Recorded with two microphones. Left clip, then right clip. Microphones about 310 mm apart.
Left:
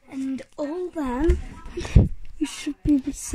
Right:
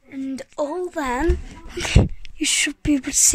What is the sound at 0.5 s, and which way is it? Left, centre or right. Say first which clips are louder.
Speech: right 6 dB; right.